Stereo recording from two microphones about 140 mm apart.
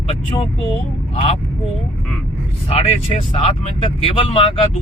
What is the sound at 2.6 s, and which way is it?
Speech, 45° left (ahead or behind).